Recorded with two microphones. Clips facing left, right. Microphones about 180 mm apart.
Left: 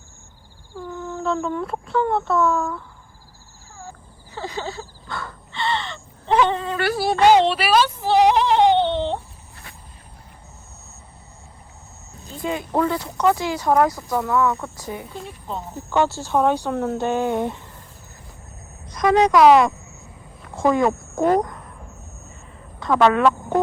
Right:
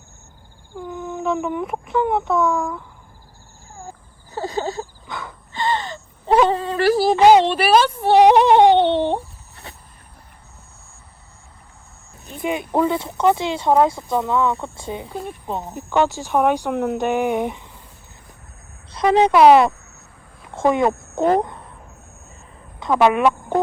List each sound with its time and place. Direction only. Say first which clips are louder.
0.8 s speech: right 2 dB; 15° right (ahead or behind)
4.3 s a sound: right 5 dB; 45° right (ahead or behind)
5.0 s crow: even; 20° right (ahead or behind)
5.5 s wail: right 3 dB; 40° right (ahead or behind)
7.8 s speech: right 4 dB; 50° right (ahead or behind)
9.7 s vehicle: right 5 dB; 30° right (ahead or behind)
12.2 s speech: right 2 dB; 20° right (ahead or behind)
15.1 s a sound: right 4 dB; 50° right (ahead or behind)
15.7 s speech: right 1 dB; 15° right (ahead or behind)
18.9 s a woman's voice: right 1 dB; 30° right (ahead or behind)
22.8 s speech: right 1 dB; 15° right (ahead or behind)